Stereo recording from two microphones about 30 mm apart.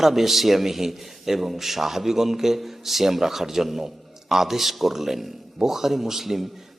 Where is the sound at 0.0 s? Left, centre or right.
Centre.